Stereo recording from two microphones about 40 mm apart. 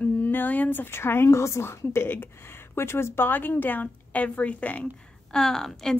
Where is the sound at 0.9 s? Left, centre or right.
Left.